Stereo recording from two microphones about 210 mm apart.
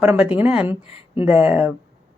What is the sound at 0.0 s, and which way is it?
A woman's voice, 5° right (ahead or behind).